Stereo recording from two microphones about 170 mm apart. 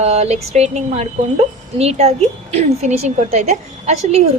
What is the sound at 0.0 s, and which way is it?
A woman's voice, 40° right (ahead or behind).